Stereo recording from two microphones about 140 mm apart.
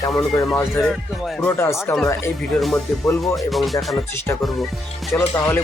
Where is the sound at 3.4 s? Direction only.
Centre (ahead or behind).